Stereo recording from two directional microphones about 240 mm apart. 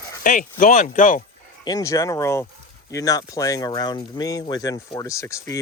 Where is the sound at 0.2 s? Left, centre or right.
Left.